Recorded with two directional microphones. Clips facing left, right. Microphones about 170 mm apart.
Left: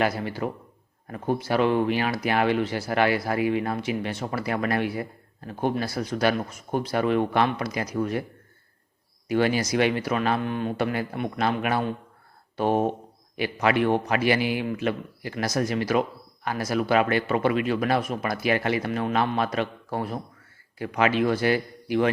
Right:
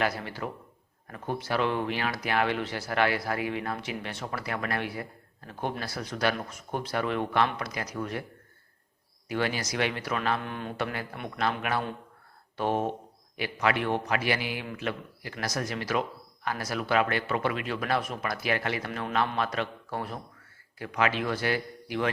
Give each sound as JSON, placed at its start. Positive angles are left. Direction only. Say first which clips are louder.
{"t": 0.0, "sound": "a man's voice", "louder": "left 5 dB", "side_deg": 15}
{"t": 1.0, "sound": "speech", "louder": "left 6 dB", "side_deg": 25}
{"t": 1.4, "sound": "a man's voice", "louder": "left 6 dB", "side_deg": 10}
{"t": 4.4, "sound": "a man's voice", "louder": "left 7 dB", "side_deg": 20}
{"t": 9.3, "sound": "a man's voice", "louder": "left 7 dB", "side_deg": 15}
{"t": 13.3, "sound": "a man's voice", "louder": "left 5 dB", "side_deg": 20}
{"t": 20.7, "sound": "a man's voice", "louder": "left 5 dB", "side_deg": 25}